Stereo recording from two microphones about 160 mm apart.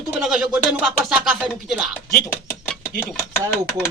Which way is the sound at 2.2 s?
15° left (ahead or behind).